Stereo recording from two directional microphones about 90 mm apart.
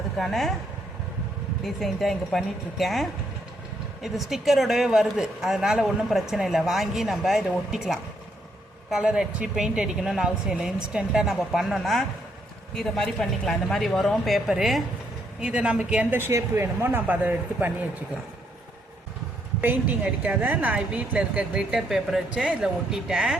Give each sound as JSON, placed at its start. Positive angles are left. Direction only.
{"t": 0.2, "sound": "a woman's voice", "side_deg": 0}
{"t": 1.6, "sound": "a woman's voice", "side_deg": 0}
{"t": 19.6, "sound": "speech", "side_deg": -15}